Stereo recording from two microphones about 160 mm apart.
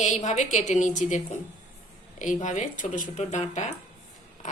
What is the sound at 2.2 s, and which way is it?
Speech, 50° left (ahead or behind).